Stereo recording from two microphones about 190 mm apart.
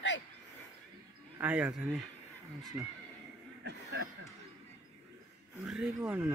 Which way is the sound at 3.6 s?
65° right (ahead or behind).